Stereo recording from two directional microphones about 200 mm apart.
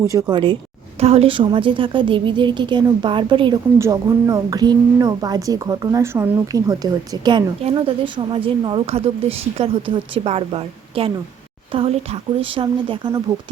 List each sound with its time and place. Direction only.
0.0 s a woman's voice: 15° right (ahead or behind)